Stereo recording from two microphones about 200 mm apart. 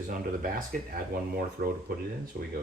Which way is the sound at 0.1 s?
45° right (ahead or behind).